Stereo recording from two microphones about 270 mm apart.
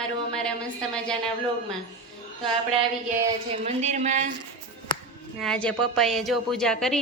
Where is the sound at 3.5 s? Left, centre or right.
Right.